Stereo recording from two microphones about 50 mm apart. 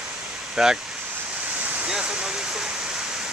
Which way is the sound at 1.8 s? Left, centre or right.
Centre.